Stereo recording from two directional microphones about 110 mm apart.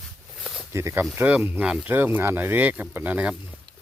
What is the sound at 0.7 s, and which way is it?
Speech, 25° right (ahead or behind).